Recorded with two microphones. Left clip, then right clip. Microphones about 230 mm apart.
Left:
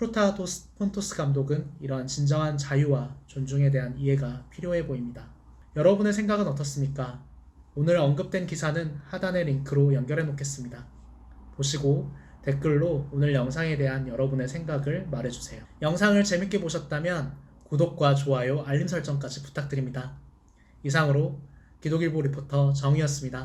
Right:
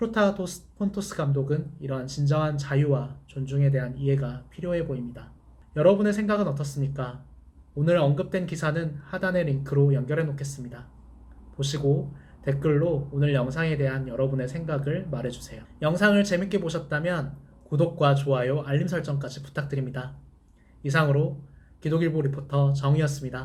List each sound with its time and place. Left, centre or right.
0.0 s speech: centre